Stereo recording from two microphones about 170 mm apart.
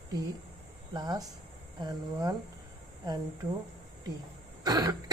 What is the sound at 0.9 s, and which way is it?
Speech, 25° right (ahead or behind).